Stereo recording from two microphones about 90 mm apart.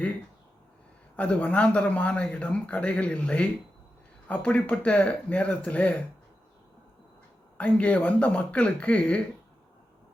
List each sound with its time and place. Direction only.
1.1 s speech: 15° left (ahead or behind)
7.6 s speech: 15° left (ahead or behind)